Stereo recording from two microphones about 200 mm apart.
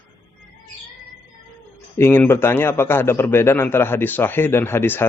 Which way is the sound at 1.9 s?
10° left (ahead or behind).